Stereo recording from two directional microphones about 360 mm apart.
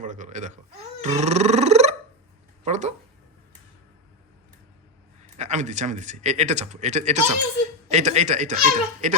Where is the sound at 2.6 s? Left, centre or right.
Centre.